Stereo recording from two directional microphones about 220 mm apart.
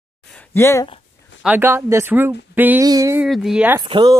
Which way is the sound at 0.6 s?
10° left (ahead or behind).